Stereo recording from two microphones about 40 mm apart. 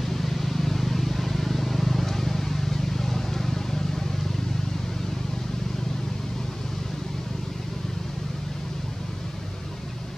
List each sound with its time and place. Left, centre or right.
0.0 s vehicle: centre